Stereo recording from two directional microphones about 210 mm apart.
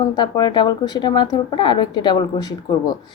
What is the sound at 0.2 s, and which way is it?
A woman's voice, 20° left (ahead or behind).